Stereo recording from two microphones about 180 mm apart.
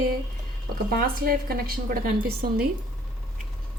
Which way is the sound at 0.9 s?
55° right (ahead or behind).